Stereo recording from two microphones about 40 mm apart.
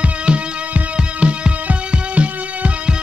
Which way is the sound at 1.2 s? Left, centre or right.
Right.